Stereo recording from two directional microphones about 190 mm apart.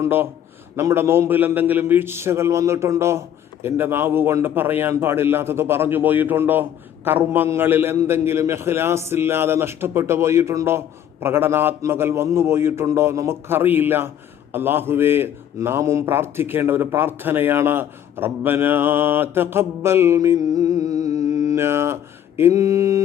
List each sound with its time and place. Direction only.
0.0 s a man's voice: 10° right (ahead or behind)